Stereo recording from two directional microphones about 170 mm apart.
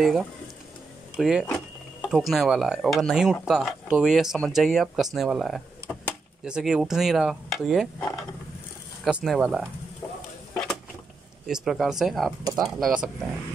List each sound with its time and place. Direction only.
0.0 s speech: centre (ahead or behind)
11.4 s speech: 5° right (ahead or behind)